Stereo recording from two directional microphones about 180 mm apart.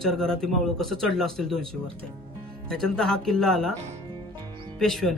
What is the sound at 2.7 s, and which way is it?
A man's voice, 5° left (ahead or behind).